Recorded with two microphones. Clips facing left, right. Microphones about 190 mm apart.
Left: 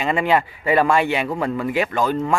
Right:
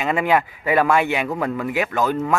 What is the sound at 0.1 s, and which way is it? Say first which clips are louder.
Speech: even; 5° right (ahead or behind).